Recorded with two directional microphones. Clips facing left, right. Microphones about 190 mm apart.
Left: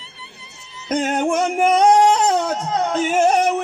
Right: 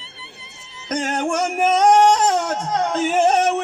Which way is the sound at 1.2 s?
Centre (ahead or behind).